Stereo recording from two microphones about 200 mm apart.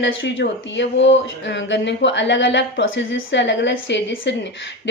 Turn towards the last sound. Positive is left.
turn(degrees=65)  # may be behind; listen again after turning